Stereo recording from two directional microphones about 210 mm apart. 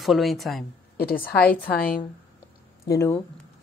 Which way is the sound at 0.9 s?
45° left (ahead or behind).